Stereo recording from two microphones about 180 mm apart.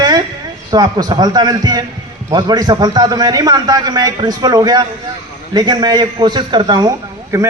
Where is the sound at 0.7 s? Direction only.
20° right (ahead or behind).